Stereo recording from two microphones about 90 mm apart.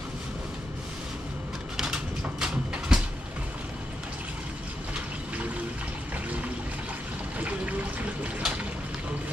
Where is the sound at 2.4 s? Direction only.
10° right (ahead or behind).